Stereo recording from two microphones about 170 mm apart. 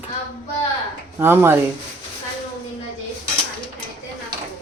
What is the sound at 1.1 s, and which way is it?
Speech, 10° right (ahead or behind).